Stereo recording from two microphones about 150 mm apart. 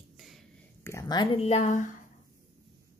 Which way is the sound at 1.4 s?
45° left (ahead or behind).